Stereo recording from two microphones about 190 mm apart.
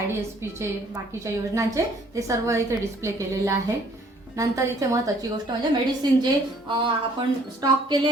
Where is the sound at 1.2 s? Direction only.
15° right (ahead or behind).